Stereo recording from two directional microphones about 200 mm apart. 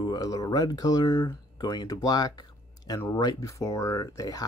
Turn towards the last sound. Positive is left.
turn(degrees=15)  # may be behind; listen again after turning